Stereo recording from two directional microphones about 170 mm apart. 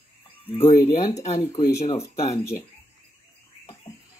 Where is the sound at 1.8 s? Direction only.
40° left (ahead or behind).